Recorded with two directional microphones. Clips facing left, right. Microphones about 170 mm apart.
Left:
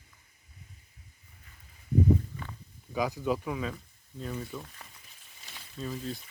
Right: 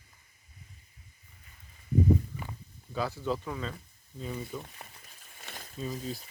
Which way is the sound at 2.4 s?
15° right (ahead or behind).